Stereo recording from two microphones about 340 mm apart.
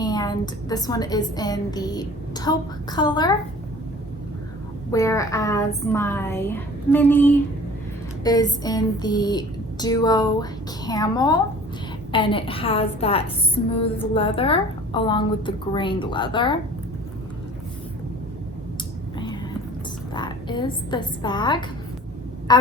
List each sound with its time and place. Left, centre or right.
0.0 s a woman's voice: centre
4.9 s a woman's voice: centre
20.1 s a woman's voice: centre